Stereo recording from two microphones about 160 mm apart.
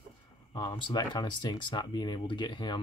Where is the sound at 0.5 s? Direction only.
25° left (ahead or behind).